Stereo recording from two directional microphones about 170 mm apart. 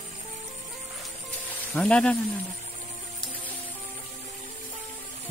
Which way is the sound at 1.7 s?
5° left (ahead or behind).